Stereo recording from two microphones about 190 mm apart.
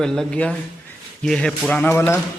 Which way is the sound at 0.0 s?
5° left (ahead or behind).